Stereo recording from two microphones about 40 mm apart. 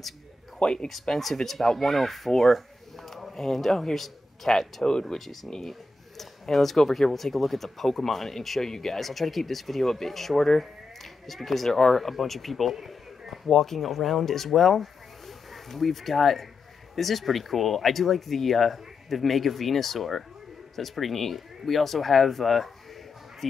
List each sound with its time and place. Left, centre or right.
0.6 s speech: left
1.0 s a man's voice: centre
13.5 s speech: centre